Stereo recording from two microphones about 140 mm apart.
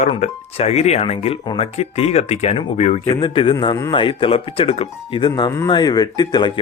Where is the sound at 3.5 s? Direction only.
25° left (ahead or behind).